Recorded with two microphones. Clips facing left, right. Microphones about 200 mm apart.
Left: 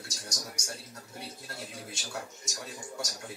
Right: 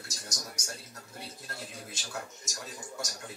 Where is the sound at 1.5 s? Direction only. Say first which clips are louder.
Left 1 dB; 5° left (ahead or behind).